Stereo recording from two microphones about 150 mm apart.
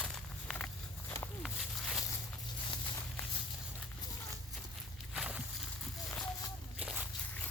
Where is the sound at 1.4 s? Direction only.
Centre (ahead or behind).